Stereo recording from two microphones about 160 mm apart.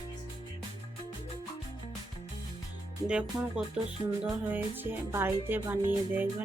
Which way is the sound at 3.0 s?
5° right (ahead or behind).